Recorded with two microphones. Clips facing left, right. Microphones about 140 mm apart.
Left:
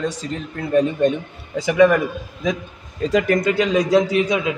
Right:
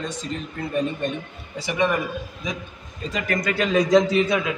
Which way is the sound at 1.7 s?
90° left.